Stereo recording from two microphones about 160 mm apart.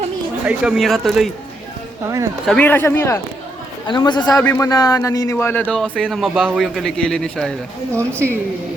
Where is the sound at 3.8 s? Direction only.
30° left (ahead or behind).